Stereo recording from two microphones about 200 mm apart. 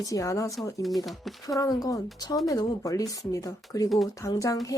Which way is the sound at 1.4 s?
15° left (ahead or behind).